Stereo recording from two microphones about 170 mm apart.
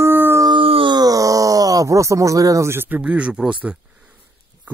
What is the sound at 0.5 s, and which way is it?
Speech, 30° right (ahead or behind).